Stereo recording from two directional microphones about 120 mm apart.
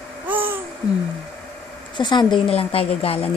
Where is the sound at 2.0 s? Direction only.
40° left (ahead or behind).